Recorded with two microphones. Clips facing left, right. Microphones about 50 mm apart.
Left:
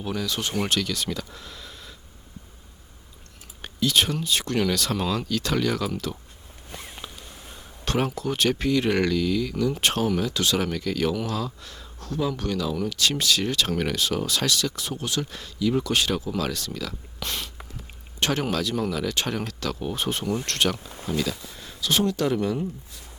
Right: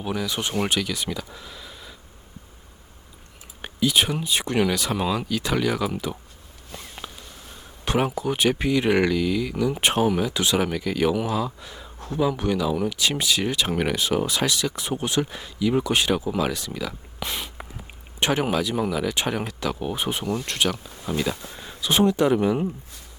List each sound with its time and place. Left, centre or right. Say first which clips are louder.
0.0 s speech: right 1 dB; centre
3.6 s speech: right 1 dB; centre
6.7 s a sound: even; centre
7.9 s speech: right 2 dB; centre
21.1 s speech: right 1 dB; centre